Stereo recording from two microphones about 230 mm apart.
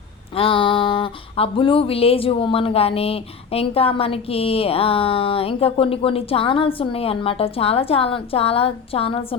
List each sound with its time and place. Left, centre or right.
0.3 s speech: left